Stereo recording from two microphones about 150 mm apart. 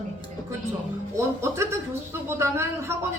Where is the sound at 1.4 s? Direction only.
20° right (ahead or behind).